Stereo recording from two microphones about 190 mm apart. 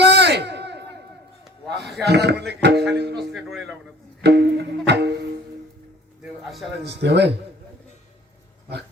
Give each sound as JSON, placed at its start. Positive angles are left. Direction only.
{"t": 0.0, "sound": "a sound", "side_deg": -60}
{"t": 2.0, "sound": "music", "side_deg": -60}
{"t": 3.3, "sound": "a man's voice", "side_deg": 0}
{"t": 4.2, "sound": "music", "side_deg": -60}
{"t": 6.4, "sound": "a man's voice", "side_deg": 0}
{"t": 6.8, "sound": "music", "side_deg": -65}